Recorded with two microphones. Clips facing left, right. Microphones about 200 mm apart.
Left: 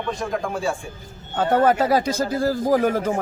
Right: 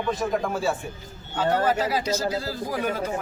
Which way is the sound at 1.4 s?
55° left (ahead or behind).